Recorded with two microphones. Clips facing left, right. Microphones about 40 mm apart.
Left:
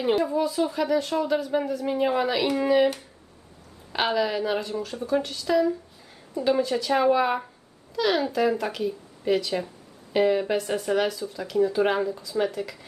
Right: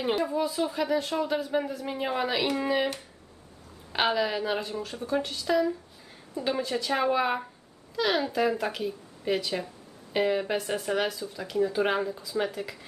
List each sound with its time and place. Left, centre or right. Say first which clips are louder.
0.0 s speech: left 4 dB; centre